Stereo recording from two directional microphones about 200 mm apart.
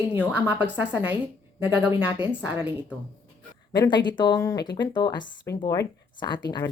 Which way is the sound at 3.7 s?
20° left (ahead or behind).